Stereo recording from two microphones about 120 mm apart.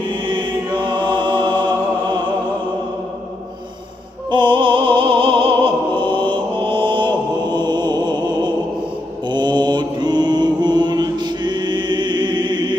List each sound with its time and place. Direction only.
0.2 s chant: 40° right (ahead or behind)
4.3 s opera: 40° right (ahead or behind)
9.3 s mantra: 40° right (ahead or behind)